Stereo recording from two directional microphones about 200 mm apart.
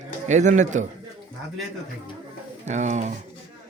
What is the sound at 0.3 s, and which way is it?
Speech, 35° right (ahead or behind).